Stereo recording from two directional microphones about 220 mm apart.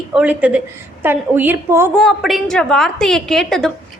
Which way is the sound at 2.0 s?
Centre (ahead or behind).